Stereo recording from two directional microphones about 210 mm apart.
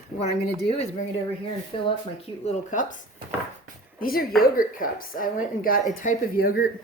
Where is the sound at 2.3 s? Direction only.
25° left (ahead or behind).